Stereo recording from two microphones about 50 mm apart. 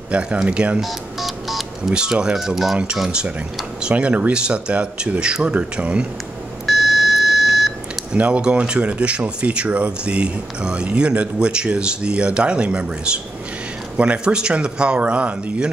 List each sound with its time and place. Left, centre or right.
0.1 s speech: right
0.7 s telephone dialing: centre
2.0 s speech: centre
2.3 s speech: centre
3.9 s speech: right
6.6 s beep: centre
8.1 s speech: right